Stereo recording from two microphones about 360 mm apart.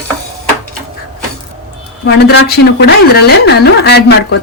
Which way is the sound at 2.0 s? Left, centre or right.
Left.